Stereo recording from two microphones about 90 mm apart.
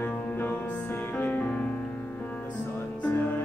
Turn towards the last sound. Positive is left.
turn(degrees=20)  # may be behind; listen again after turning